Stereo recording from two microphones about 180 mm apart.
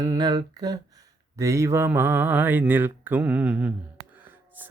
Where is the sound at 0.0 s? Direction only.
20° right (ahead or behind).